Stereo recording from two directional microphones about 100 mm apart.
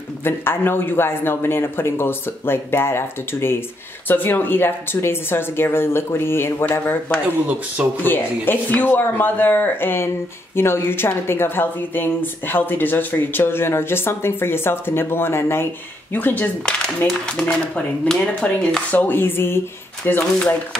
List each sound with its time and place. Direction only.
0.2 s speech: 25° left (ahead or behind)
7.4 s speech: 15° right (ahead or behind)
8.0 s speech: 20° left (ahead or behind)